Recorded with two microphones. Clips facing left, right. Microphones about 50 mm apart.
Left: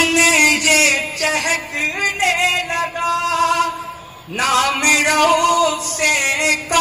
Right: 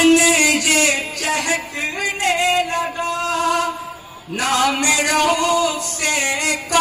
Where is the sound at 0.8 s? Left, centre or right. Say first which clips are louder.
Left 3 dB; centre.